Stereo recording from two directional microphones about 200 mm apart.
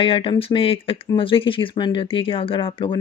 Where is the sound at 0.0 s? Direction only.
25° left (ahead or behind).